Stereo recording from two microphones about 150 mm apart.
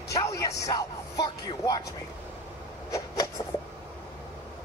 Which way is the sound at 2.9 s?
20° left (ahead or behind).